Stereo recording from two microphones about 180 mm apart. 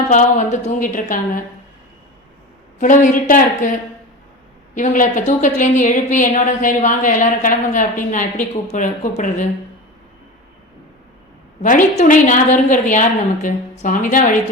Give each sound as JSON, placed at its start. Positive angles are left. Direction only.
{"t": 0.1, "sound": "a woman's voice", "side_deg": 45}
{"t": 2.7, "sound": "a woman's voice", "side_deg": 45}
{"t": 4.7, "sound": "a woman's voice", "side_deg": 45}
{"t": 11.6, "sound": "a woman's voice", "side_deg": 45}